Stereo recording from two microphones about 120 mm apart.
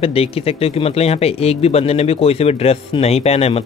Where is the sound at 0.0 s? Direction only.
55° left (ahead or behind).